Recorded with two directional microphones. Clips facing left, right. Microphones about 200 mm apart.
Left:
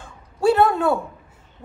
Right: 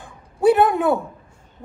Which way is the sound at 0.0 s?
20° right (ahead or behind).